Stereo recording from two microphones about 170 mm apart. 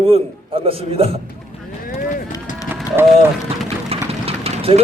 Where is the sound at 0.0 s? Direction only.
35° right (ahead or behind).